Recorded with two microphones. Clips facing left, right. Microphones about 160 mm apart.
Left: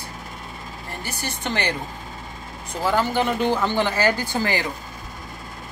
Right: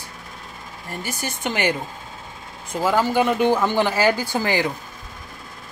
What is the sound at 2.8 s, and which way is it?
Speech, 10° right (ahead or behind).